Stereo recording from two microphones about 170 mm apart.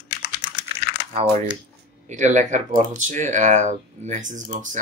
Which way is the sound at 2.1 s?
45° right (ahead or behind).